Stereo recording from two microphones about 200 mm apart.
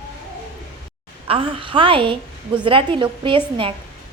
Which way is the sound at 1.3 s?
25° right (ahead or behind).